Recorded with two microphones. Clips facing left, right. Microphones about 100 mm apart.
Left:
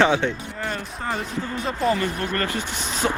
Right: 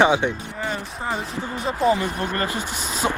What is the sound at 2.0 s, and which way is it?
Speech, 20° right (ahead or behind).